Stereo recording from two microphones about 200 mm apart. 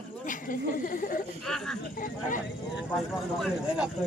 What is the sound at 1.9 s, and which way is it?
Speech, 40° left (ahead or behind).